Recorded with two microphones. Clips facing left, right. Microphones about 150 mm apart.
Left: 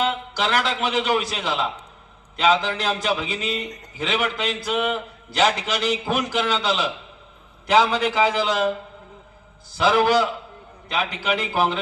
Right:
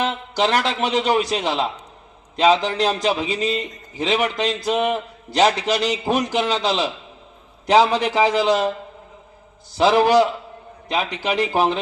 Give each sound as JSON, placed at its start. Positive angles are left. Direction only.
{"t": 0.1, "sound": "a man's voice", "side_deg": -40}
{"t": 9.7, "sound": "a man's voice", "side_deg": -35}